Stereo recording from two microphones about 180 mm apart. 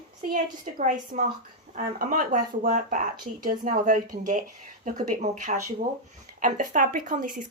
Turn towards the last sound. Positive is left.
turn(degrees=-50)  # may be behind; listen again after turning